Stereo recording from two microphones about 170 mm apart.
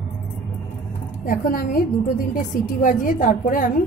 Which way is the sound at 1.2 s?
55° left (ahead or behind).